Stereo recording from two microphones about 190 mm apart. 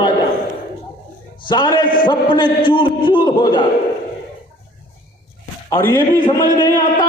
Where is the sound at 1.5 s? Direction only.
25° left (ahead or behind).